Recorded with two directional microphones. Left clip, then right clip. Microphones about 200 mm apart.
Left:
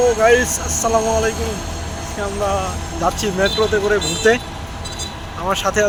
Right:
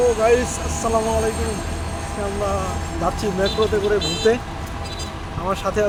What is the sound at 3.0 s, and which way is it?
Speech, 15° left (ahead or behind).